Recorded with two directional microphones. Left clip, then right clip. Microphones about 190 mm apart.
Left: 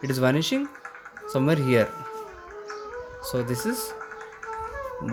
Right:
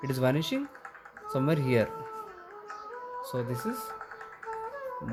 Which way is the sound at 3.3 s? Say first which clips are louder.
Left 7 dB; 10° left (ahead or behind).